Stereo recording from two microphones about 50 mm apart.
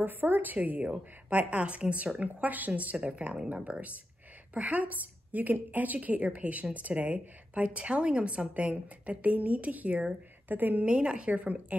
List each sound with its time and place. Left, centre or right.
0.0 s a woman's voice: right
0.6 s a woman's voice: right